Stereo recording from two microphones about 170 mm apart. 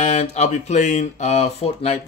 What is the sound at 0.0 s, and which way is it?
Speech, 40° left (ahead or behind).